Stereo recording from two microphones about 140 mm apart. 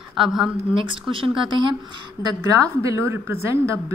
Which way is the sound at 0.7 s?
35° right (ahead or behind).